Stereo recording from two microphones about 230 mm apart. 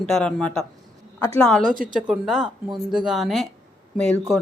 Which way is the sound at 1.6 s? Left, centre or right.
Right.